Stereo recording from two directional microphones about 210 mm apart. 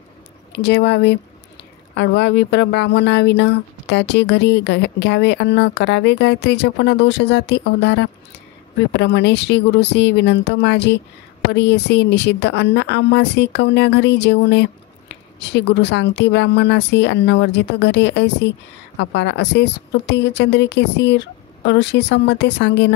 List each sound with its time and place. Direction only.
0.5 s speech: 55° left (ahead or behind)